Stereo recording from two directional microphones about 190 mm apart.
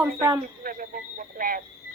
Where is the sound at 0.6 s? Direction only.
45° right (ahead or behind).